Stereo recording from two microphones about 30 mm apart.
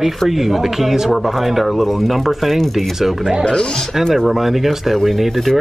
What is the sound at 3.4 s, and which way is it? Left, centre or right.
Speech, left.